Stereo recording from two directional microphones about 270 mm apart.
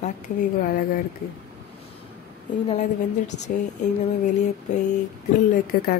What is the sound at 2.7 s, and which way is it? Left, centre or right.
Speech, left.